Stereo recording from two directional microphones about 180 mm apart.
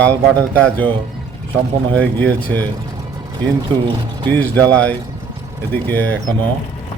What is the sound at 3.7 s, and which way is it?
Speech, 30° right (ahead or behind).